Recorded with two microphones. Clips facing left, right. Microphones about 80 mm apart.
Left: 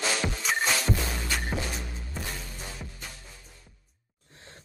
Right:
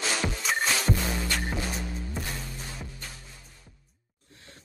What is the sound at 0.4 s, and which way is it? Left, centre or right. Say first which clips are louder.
Music: even; centre.